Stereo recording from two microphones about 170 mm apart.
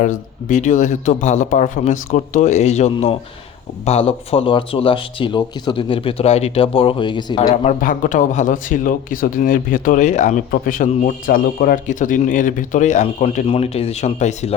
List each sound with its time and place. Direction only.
0.0 s speech: 50° left (ahead or behind); by 7.3 s 25° left (ahead or behind)
7.5 s speech: 45° left (ahead or behind)